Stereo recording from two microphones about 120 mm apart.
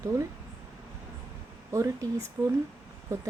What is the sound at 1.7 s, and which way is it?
Speech, 25° right (ahead or behind).